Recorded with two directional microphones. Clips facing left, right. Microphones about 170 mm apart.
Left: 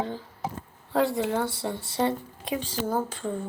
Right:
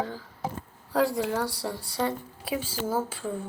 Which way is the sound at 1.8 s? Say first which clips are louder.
Left 3 dB; 25° left (ahead or behind).